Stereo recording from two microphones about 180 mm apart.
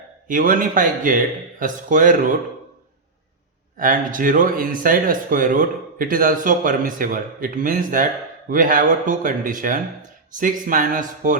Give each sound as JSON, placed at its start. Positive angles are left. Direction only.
{"t": 0.3, "sound": "speech", "side_deg": -50}
{"t": 3.8, "sound": "speech", "side_deg": -50}